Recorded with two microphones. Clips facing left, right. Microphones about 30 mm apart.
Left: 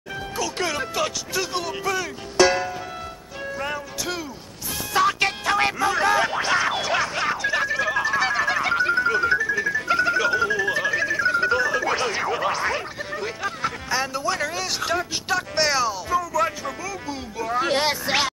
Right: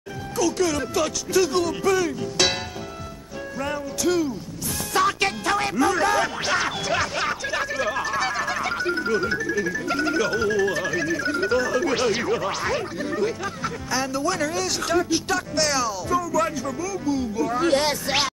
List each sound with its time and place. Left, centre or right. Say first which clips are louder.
0.6 s speech: right 2 dB; left; by 2.1 s centre
3.5 s music: right 2 dB; centre
5.8 s speech: even; centre
12.4 s speech: left 1 dB; centre